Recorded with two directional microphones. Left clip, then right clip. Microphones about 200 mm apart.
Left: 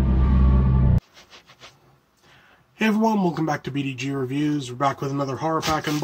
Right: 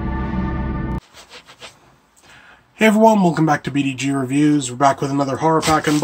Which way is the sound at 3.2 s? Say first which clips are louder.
Right 7 dB; centre (ahead or behind).